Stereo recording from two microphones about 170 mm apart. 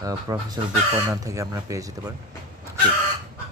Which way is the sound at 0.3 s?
20° right (ahead or behind).